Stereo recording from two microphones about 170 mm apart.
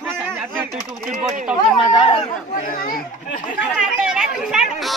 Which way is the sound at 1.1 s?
50° right (ahead or behind).